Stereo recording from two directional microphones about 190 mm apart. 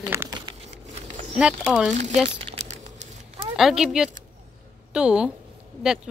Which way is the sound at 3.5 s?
Centre (ahead or behind).